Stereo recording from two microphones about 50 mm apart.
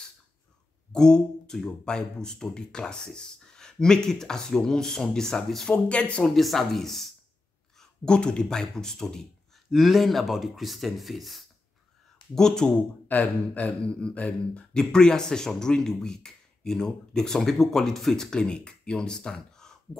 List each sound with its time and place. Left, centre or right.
0.9 s speech: centre
5.7 s speech: left
6.2 s speech: centre
8.0 s speech: centre
9.7 s speech: centre
12.4 s speech: centre
13.1 s speech: left
13.7 s speech: left
14.7 s speech: centre